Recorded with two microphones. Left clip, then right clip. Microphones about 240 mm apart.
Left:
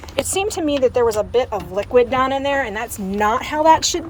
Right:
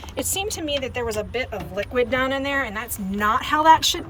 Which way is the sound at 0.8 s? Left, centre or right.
Left.